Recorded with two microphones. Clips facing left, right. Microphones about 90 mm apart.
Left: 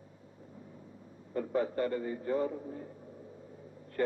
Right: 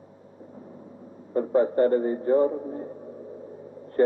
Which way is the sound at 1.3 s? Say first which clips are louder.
Right 10 dB; 35° right (ahead or behind).